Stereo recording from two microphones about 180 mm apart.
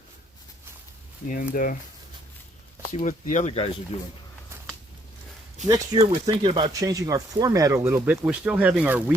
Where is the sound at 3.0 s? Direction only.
45° left (ahead or behind).